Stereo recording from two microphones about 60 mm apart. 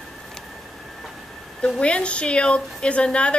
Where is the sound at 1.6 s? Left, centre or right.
Centre.